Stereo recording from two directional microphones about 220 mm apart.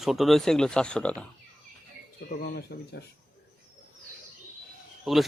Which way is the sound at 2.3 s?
45° left (ahead or behind).